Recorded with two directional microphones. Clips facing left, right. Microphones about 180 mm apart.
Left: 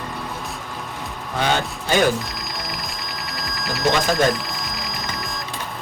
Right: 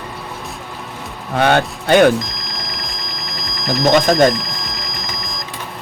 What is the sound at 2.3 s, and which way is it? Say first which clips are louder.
Music: right 1 dB; 5° left (ahead or behind).